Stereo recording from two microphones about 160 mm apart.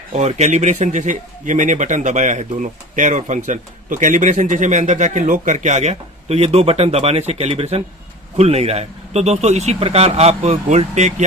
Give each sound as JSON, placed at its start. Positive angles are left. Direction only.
{"t": 0.1, "sound": "speech", "side_deg": -45}